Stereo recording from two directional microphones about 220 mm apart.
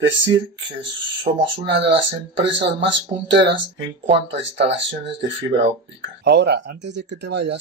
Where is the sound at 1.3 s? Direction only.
30° right (ahead or behind).